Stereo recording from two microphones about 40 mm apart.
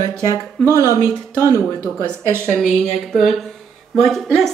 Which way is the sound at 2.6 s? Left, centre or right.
Centre.